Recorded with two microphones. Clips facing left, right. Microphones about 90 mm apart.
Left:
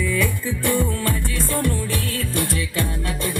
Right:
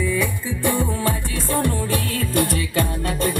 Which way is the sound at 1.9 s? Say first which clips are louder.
Right 3 dB; 45° right (ahead or behind).